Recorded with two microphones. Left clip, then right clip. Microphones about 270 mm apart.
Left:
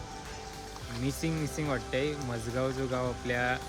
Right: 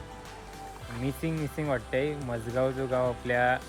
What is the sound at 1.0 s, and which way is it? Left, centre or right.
Speech, centre.